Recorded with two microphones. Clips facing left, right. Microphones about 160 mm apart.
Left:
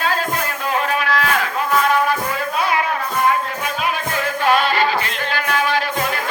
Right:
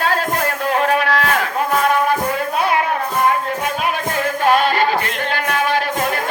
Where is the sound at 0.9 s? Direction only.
60° right (ahead or behind).